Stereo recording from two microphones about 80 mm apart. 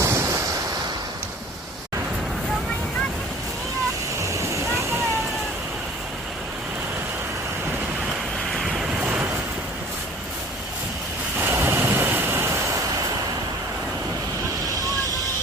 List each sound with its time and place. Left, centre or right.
0.0 s waves: right
4.2 s a sound: right
8.5 s vehicle: centre
9.0 s vehicle: right
11.3 s thunder: right